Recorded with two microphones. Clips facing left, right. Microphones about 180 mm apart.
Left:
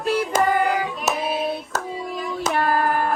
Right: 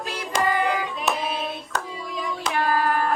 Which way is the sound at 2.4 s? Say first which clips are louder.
Left 2 dB; 50° left (ahead or behind).